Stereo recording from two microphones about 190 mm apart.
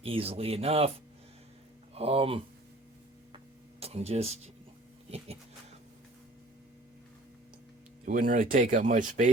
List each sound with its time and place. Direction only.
0.0 s speech: 30° right (ahead or behind)
2.0 s speech: 30° right (ahead or behind)
3.3 s tick-tock: 30° right (ahead or behind)
8.0 s speech: 45° right (ahead or behind)